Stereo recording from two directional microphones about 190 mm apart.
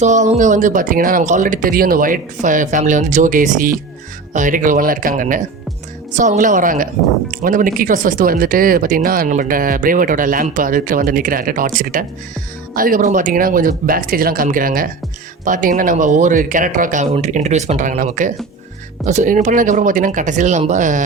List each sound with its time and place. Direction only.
0.0 s speech: 35° right (ahead or behind)